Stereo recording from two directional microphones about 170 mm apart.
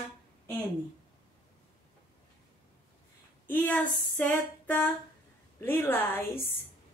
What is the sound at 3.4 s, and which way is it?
Female singing, 10° left (ahead or behind).